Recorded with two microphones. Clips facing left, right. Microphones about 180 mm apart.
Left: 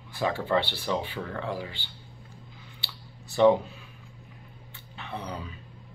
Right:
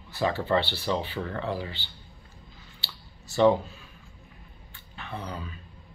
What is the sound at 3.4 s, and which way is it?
Speech, 15° left (ahead or behind).